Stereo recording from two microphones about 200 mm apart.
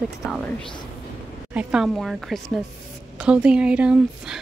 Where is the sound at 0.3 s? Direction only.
5° left (ahead or behind).